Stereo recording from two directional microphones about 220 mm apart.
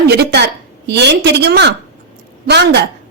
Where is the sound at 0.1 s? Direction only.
45° right (ahead or behind).